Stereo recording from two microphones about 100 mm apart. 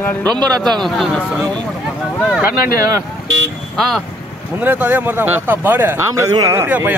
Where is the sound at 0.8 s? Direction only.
5° left (ahead or behind).